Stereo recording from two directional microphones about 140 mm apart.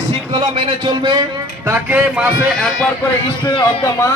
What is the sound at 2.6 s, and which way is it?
Speech, 5° left (ahead or behind).